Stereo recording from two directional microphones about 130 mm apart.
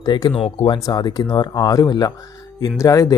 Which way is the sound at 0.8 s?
30° left (ahead or behind).